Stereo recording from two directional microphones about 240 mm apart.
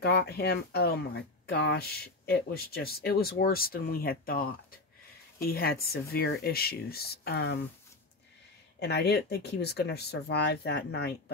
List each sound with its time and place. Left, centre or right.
0.0 s speech: left
8.7 s speech: left